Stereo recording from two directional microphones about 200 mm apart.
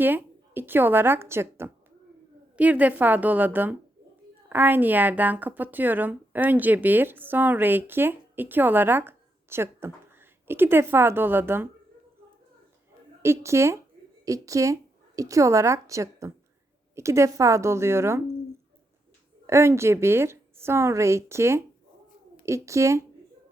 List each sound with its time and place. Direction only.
0.0 s speech: 10° right (ahead or behind)
13.2 s a woman's voice: 15° right (ahead or behind)
19.5 s speech: 15° right (ahead or behind)